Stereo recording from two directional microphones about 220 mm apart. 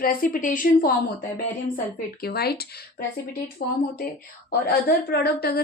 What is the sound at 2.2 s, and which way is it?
Speech, 45° left (ahead or behind).